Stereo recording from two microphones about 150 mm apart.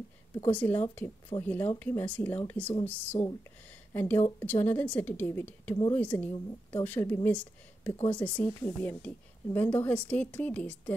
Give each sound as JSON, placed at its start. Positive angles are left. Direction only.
{"t": 0.5, "sound": "a woman's voice", "side_deg": 10}